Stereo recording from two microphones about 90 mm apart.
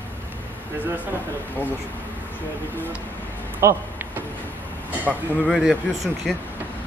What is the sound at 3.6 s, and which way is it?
Speech, 35° right (ahead or behind).